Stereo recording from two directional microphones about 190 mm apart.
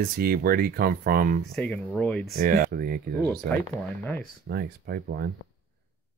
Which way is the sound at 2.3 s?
45° right (ahead or behind).